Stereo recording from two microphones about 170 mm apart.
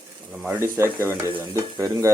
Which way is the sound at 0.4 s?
15° right (ahead or behind).